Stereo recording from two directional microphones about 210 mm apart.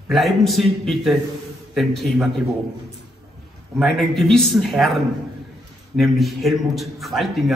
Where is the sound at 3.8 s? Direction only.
Centre (ahead or behind).